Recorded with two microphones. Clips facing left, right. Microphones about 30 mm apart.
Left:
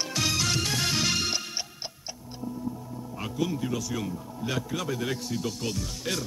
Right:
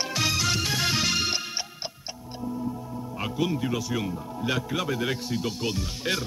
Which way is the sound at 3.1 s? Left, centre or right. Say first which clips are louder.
Right 2 dB; right.